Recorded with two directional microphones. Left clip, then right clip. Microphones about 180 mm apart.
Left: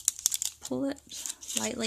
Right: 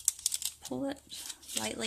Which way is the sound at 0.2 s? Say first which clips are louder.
Left 4 dB; 25° left (ahead or behind).